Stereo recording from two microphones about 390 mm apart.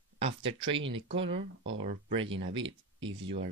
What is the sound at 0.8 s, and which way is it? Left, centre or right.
Speech, right.